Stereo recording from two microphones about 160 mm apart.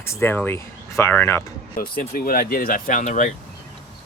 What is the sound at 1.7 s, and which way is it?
Speech, 65° left (ahead or behind).